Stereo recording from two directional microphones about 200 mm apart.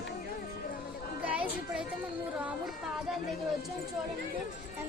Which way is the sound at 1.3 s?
5° right (ahead or behind).